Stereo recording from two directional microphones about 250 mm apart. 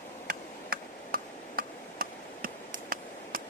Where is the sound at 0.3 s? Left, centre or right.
Right.